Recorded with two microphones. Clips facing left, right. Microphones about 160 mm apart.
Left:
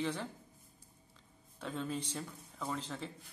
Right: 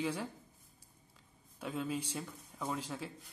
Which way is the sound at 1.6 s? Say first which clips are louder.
Right 1 dB; 10° right (ahead or behind).